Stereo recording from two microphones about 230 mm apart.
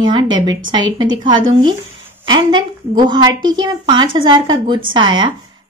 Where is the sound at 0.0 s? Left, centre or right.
Centre.